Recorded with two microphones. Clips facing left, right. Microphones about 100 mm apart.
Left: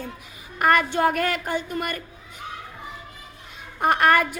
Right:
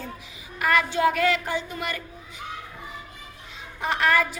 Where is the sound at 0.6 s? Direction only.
50° left (ahead or behind).